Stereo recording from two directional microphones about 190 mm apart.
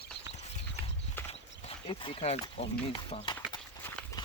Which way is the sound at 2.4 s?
25° left (ahead or behind).